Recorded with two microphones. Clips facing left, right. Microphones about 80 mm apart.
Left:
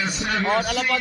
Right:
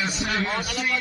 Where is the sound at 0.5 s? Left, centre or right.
Left.